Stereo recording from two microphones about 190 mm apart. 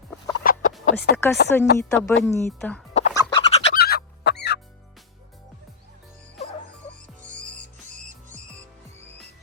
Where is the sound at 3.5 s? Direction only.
35° left (ahead or behind).